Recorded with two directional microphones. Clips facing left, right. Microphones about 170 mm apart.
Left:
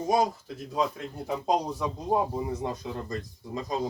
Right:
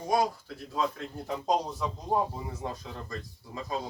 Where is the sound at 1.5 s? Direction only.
10° left (ahead or behind).